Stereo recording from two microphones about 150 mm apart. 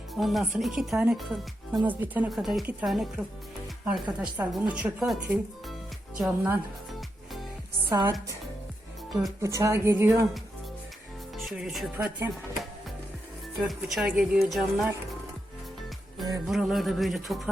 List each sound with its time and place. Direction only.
0.1 s speech: centre (ahead or behind)
1.8 s speech: 10° right (ahead or behind)
2.3 s speech: centre (ahead or behind)
7.9 s speech: 25° right (ahead or behind)
9.4 s speech: 20° right (ahead or behind)
11.4 s speech: centre (ahead or behind)
13.7 s speech: centre (ahead or behind)
16.5 s speech: centre (ahead or behind)